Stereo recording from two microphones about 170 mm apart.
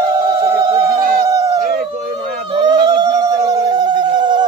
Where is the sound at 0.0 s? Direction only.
20° right (ahead or behind).